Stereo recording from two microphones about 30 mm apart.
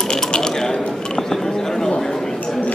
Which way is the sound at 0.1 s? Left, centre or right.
Left.